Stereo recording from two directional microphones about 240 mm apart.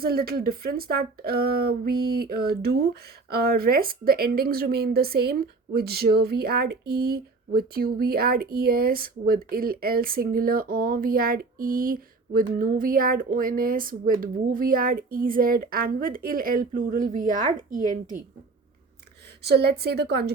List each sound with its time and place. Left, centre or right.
0.0 s speech: right
19.4 s speech: right